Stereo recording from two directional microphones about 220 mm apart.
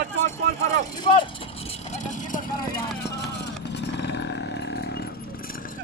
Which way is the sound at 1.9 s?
35° left (ahead or behind).